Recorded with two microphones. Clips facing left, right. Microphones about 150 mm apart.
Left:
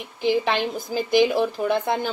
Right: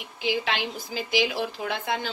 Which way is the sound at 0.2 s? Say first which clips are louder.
Left 6 dB; 50° left (ahead or behind).